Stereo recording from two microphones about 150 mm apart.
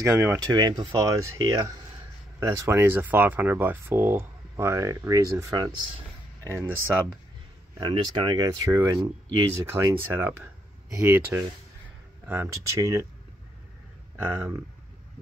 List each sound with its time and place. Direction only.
0.0 s speech: 20° right (ahead or behind)
0.5 s speech: 30° right (ahead or behind)
7.8 s speech: 35° right (ahead or behind)
14.2 s speech: 15° right (ahead or behind)